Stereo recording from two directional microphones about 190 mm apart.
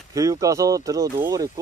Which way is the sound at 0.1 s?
20° right (ahead or behind).